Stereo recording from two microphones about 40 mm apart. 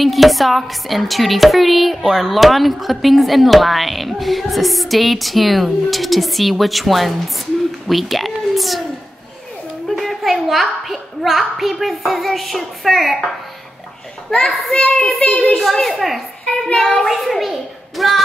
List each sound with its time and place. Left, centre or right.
0.0 s a woman's voice: centre
9.8 s a child's voice: centre
14.3 s a child's voice: centre
15.6 s a woman's voice: centre
16.7 s a child's voice: centre
17.0 s a child's voice: centre